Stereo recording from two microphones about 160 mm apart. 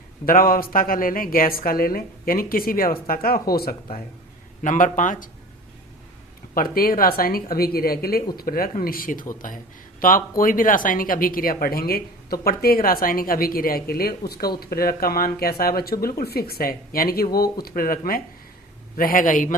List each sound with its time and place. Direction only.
0.3 s speech: 65° left (ahead or behind)
4.6 s speech: 55° left (ahead or behind)
6.5 s speech: 65° left (ahead or behind)